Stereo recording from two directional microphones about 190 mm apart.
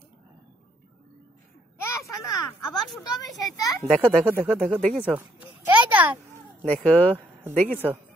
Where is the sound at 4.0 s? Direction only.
10° right (ahead or behind).